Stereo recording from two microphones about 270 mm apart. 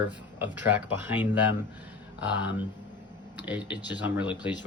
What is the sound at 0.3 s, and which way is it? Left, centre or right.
Speech, centre.